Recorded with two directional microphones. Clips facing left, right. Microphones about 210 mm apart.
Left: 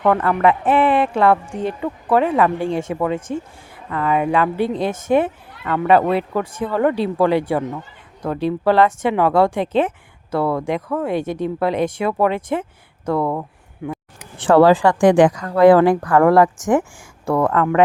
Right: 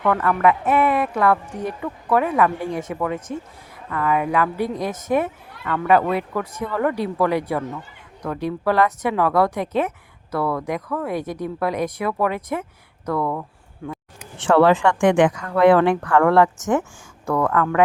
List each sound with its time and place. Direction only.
0.0 s speech: 30° left (ahead or behind)
13.8 s speech: 15° left (ahead or behind)
14.3 s speech: 35° left (ahead or behind)